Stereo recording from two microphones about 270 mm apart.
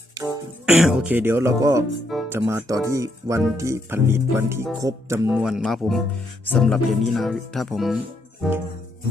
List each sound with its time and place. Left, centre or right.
0.6 s speech: centre